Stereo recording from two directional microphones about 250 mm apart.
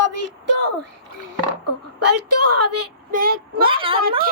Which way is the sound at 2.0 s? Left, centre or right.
Right.